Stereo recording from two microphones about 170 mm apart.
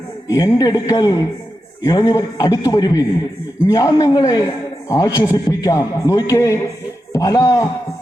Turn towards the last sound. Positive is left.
turn(degrees=20)  # may be behind; listen again after turning